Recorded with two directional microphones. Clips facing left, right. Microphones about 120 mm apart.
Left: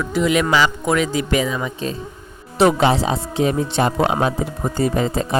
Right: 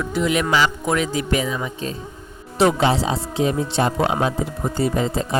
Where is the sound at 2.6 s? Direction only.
60° left (ahead or behind).